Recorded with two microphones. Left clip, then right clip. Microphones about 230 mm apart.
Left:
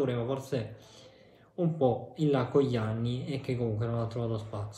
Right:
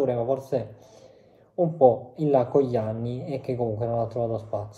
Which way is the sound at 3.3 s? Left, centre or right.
Left.